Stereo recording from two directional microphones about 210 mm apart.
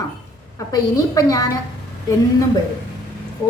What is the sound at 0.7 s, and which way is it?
Speech, 15° left (ahead or behind).